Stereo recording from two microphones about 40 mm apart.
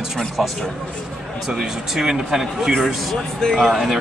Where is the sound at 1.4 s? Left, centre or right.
Centre.